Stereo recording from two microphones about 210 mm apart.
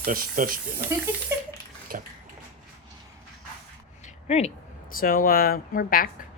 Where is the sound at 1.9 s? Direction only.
40° right (ahead or behind).